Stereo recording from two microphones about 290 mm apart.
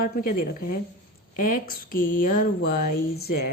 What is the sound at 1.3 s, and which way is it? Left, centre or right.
A woman's voice, left.